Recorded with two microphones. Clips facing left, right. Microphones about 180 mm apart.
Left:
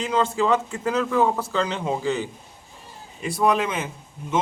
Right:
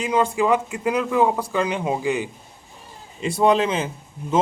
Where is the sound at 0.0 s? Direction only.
10° right (ahead or behind).